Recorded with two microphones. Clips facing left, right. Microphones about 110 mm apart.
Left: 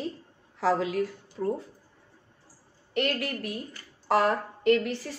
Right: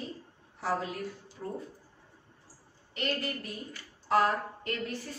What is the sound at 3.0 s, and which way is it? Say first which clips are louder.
A woman's voice: left 5 dB; 70° left (ahead or behind).